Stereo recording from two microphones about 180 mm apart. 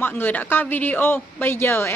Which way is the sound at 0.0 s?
10° left (ahead or behind).